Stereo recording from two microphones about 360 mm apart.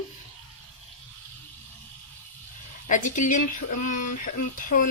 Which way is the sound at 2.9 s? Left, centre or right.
Left.